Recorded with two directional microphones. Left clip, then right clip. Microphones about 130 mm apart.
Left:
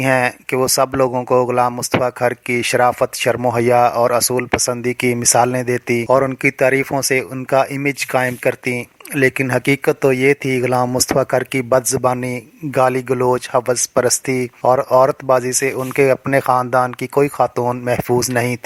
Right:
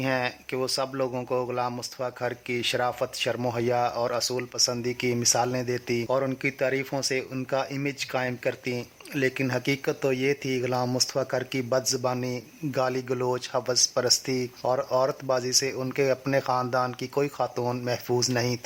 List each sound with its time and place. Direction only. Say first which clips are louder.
0.0 s speech: left 12 dB; 45° left (ahead or behind)